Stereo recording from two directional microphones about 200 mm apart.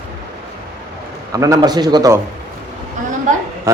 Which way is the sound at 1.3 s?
15° right (ahead or behind).